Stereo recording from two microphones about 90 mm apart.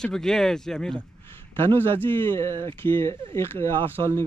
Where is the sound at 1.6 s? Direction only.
25° left (ahead or behind).